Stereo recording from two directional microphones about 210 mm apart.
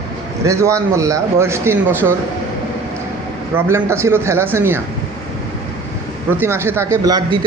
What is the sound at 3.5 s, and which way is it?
Speech, 10° right (ahead or behind).